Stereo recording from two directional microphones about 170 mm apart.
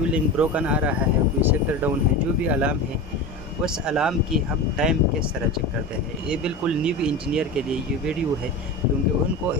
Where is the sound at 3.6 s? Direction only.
5° right (ahead or behind).